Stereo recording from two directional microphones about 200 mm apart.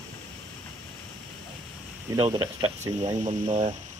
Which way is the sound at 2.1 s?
25° right (ahead or behind).